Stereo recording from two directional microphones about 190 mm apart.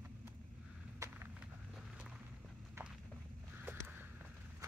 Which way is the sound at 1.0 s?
10° right (ahead or behind).